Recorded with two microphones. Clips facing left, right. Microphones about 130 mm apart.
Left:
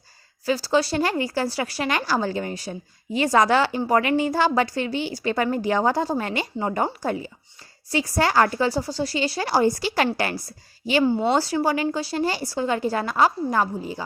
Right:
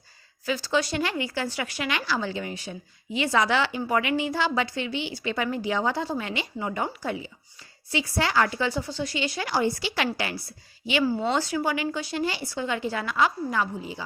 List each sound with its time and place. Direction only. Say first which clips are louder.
0.4 s speech: left 5 dB; 35° left (ahead or behind)
11.0 s speech: left 4 dB; 25° left (ahead or behind)
11.3 s speech: left 4 dB; 35° left (ahead or behind)